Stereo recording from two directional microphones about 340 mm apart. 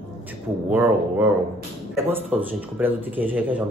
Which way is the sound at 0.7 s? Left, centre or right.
Centre.